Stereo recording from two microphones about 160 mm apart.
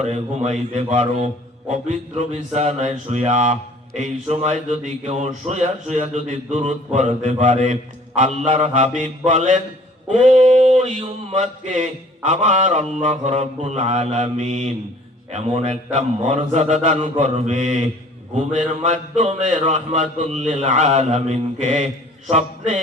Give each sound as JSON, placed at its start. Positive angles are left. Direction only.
{"t": 0.0, "sound": "speech", "side_deg": -45}
{"t": 18.9, "sound": "speech", "side_deg": -45}